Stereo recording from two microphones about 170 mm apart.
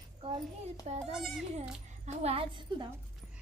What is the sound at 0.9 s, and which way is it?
Speech, 40° right (ahead or behind).